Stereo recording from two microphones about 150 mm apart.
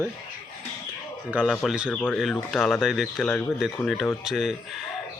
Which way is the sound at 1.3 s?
5° right (ahead or behind).